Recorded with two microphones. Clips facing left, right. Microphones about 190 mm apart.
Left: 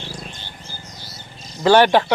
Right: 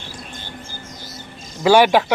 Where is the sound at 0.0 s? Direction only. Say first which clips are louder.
Left 1 dB; 50° right (ahead or behind).